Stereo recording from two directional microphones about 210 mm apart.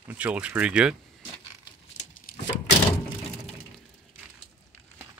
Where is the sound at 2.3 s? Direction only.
45° left (ahead or behind).